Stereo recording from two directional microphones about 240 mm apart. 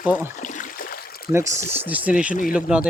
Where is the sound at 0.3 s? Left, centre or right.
Left.